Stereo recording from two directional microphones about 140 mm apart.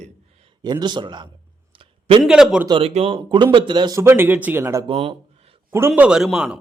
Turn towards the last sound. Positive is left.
turn(degrees=-5)  # may be behind; listen again after turning